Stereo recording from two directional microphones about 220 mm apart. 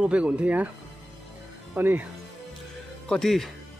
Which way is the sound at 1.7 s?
10° right (ahead or behind).